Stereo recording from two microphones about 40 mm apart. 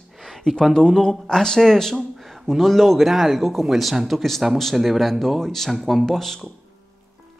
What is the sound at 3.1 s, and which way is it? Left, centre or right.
Speech, centre.